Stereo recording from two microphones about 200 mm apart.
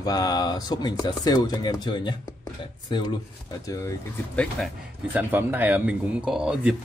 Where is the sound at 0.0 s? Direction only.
20° left (ahead or behind).